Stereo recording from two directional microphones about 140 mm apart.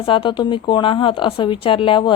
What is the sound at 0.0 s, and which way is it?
A woman's voice, 40° left (ahead or behind).